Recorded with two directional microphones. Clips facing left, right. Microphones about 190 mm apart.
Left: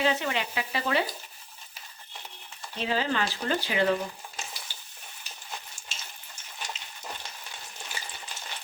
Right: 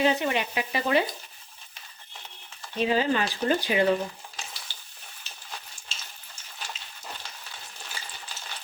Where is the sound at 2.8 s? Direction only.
15° right (ahead or behind).